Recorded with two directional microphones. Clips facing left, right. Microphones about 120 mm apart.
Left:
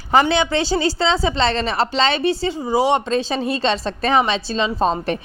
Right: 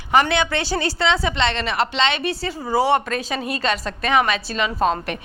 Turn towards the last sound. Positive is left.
turn(degrees=30)  # may be behind; listen again after turning